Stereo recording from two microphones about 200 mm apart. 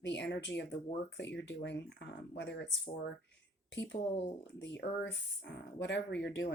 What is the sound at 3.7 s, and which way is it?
Speech, 60° left (ahead or behind).